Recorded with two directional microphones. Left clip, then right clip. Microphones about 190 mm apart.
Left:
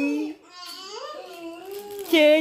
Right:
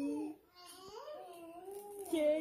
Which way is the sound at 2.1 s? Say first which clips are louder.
Left 17 dB; 35° left (ahead or behind).